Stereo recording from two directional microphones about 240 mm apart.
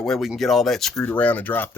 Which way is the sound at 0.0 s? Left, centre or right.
Centre.